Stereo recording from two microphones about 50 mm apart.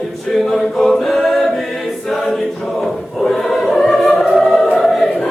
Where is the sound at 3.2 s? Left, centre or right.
Centre.